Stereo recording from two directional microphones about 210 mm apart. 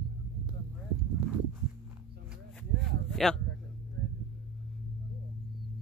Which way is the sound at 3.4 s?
55° right (ahead or behind).